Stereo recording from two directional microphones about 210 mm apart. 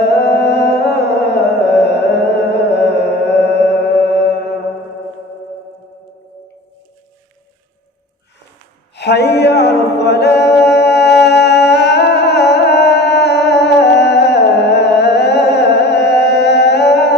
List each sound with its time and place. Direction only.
0.0 s music: 55° left (ahead or behind)
9.0 s a capella: 55° left (ahead or behind)
10.6 s music: 55° left (ahead or behind)